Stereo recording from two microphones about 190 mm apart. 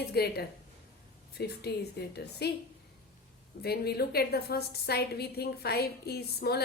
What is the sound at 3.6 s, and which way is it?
A woman's voice, 55° left (ahead or behind).